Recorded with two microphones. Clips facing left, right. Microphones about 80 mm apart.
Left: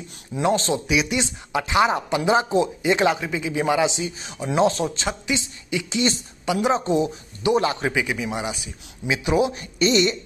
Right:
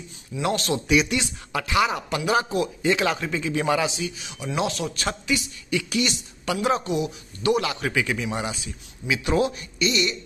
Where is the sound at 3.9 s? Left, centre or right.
Left.